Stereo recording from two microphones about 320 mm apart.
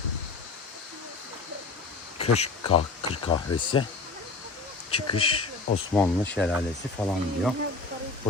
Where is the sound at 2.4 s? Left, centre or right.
Centre.